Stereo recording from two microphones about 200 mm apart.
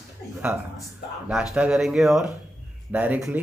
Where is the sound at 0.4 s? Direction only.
5° right (ahead or behind).